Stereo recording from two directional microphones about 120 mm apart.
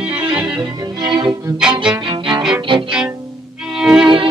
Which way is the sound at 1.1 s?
35° right (ahead or behind).